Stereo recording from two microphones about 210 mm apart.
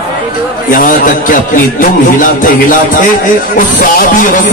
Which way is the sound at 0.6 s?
40° left (ahead or behind).